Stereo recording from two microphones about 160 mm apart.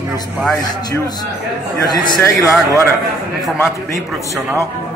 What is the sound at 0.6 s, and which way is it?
A man's voice, 25° left (ahead or behind).